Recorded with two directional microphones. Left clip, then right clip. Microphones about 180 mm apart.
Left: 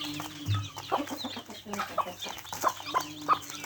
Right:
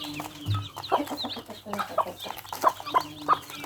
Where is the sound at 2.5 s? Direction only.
15° right (ahead or behind).